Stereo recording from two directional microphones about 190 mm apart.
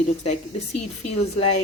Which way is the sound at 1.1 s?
35° left (ahead or behind).